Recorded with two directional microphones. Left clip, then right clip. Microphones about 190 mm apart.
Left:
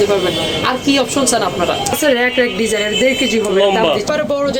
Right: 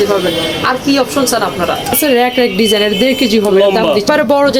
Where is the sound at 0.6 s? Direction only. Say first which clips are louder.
Right 3 dB; centre (ahead or behind).